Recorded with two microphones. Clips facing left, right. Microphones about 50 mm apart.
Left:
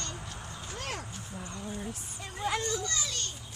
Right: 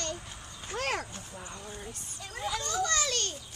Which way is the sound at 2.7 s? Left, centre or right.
Right.